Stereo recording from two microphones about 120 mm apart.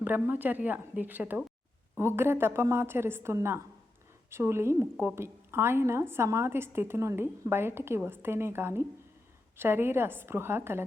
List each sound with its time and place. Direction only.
0.0 s a woman's voice: 15° right (ahead or behind)